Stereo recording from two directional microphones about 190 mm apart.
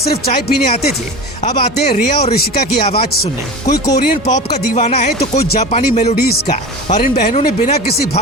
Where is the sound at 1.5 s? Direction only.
30° left (ahead or behind).